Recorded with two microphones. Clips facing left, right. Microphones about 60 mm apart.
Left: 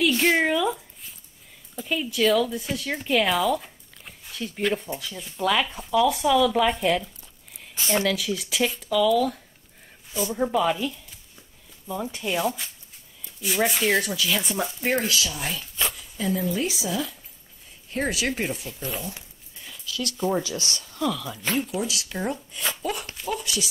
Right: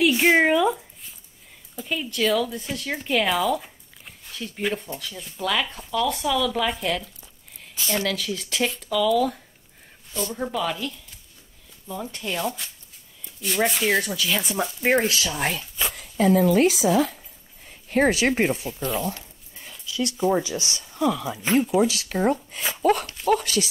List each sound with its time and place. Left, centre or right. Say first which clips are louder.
0.0 s a sound: right 3 dB; centre
1.8 s speech: left 1 dB; centre
7.8 s speech: left 1 dB; left
8.1 s speech: left 1 dB; centre
10.1 s speech: left 3 dB; centre
15.0 s speech: right 2 dB; right
15.9 s speech: right 12 dB; right
19.7 s a sound: right 4 dB; right
20.2 s speech: right 3 dB; centre
21.8 s speech: right 7 dB; right
22.6 s speech: right 1 dB; centre
23.2 s speech: right 8 dB; right